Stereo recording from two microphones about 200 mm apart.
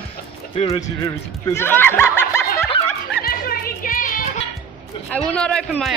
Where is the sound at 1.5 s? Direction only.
10° left (ahead or behind).